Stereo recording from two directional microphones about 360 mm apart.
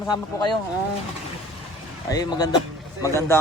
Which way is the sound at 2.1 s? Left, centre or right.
Centre.